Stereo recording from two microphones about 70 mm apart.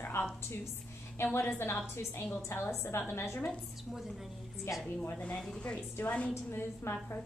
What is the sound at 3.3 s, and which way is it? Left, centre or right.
Speech, left.